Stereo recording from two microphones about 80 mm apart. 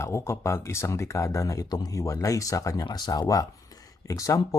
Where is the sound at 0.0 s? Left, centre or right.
Left.